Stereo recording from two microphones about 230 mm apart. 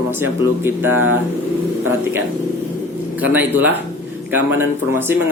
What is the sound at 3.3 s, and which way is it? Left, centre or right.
Speech, centre.